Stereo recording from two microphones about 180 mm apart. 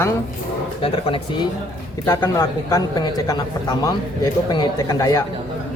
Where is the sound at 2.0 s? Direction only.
15° left (ahead or behind).